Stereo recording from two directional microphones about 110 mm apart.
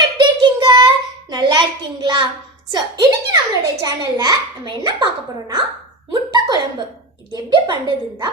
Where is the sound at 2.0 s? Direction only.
45° right (ahead or behind).